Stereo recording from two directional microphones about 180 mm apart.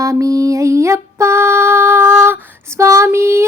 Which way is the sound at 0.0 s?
20° right (ahead or behind).